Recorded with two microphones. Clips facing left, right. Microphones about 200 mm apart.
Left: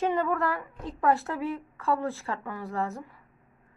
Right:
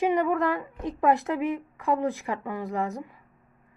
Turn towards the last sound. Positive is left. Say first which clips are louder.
# right 2 dB
turn(degrees=-15)  # may be behind; listen again after turning